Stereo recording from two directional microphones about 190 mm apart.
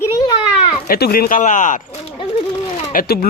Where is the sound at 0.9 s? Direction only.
55° left (ahead or behind).